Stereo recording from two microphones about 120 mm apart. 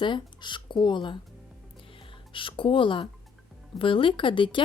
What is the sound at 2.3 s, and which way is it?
Speech, 45° left (ahead or behind).